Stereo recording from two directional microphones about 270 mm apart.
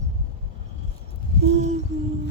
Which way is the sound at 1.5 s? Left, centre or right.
Right.